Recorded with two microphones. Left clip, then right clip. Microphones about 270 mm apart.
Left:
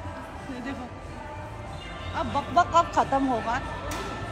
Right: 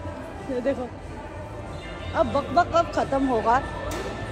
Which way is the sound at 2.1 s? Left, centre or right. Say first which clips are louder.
Right 3 dB; centre.